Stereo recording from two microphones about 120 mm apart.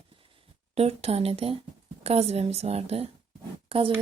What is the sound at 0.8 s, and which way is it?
A woman's voice, 55° right (ahead or behind).